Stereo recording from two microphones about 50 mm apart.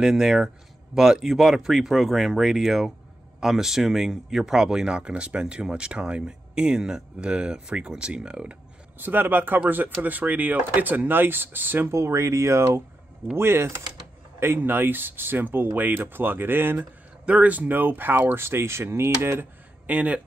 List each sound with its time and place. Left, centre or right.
0.0 s speech: centre
9.0 s speech: right
11.9 s speech: right
13.3 s speech: right
17.3 s speech: right
18.4 s speech: right
19.9 s speech: right